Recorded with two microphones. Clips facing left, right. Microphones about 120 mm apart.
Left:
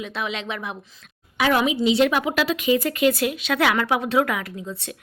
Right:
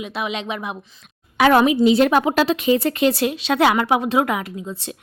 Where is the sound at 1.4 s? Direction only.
60° right (ahead or behind).